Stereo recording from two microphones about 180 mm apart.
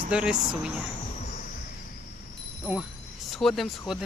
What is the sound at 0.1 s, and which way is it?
Speech, 5° right (ahead or behind).